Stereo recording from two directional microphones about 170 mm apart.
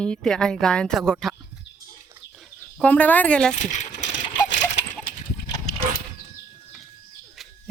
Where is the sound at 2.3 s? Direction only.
5° left (ahead or behind).